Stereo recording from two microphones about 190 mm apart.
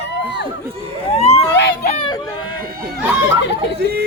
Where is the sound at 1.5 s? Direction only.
60° left (ahead or behind).